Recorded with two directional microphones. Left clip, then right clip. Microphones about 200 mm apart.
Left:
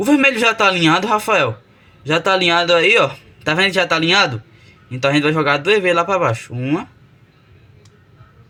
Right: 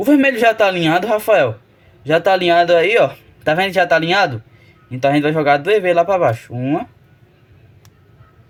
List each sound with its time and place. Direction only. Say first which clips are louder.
0.0 s speech: right 1 dB; 20° right (ahead or behind)